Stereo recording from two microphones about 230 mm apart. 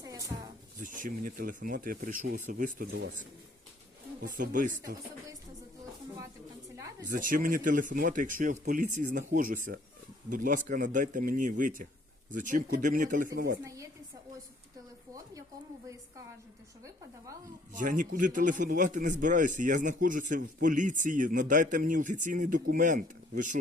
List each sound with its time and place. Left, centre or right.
0.0 s a sound: centre
0.8 s a man's voice: right
4.2 s a man's voice: right
6.7 s a sound: centre
7.1 s a man's voice: right
17.7 s a man's voice: right